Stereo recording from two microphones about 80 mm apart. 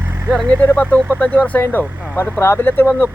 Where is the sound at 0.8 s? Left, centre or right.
Left.